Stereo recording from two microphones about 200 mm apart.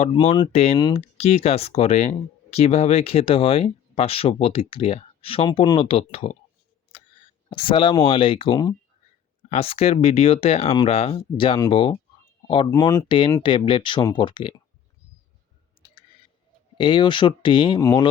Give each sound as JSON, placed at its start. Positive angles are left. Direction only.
{"t": 0.2, "sound": "speech", "side_deg": 25}
{"t": 7.5, "sound": "speech", "side_deg": 25}
{"t": 15.8, "sound": "clicking", "side_deg": 25}
{"t": 16.7, "sound": "speech", "side_deg": 25}